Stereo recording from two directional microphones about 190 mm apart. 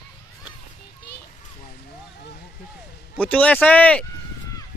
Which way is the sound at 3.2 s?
5° left (ahead or behind).